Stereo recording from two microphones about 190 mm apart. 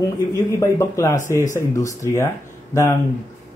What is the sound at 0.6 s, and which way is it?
Speech, 15° left (ahead or behind).